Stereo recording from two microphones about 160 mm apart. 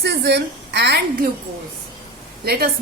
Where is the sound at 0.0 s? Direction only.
90° right.